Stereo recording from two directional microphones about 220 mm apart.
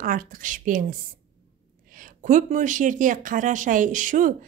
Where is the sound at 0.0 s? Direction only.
40° right (ahead or behind).